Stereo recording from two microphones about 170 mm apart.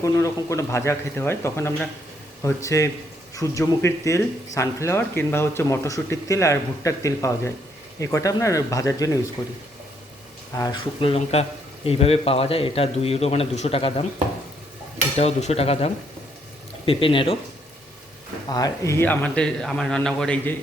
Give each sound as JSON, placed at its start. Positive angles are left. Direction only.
{"t": 0.0, "sound": "speech", "side_deg": 15}
{"t": 10.6, "sound": "a man's voice", "side_deg": 25}
{"t": 15.2, "sound": "a man's voice", "side_deg": 40}
{"t": 18.4, "sound": "speech", "side_deg": 20}